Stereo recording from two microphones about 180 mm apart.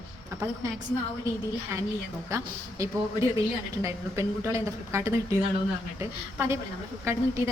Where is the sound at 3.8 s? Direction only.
15° right (ahead or behind).